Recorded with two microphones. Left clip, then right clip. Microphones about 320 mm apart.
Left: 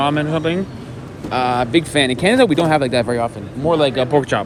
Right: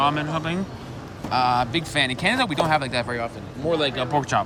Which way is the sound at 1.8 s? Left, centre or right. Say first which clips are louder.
Left 6 dB; right.